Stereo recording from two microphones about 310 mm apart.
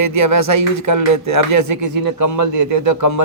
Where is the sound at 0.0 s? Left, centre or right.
Right.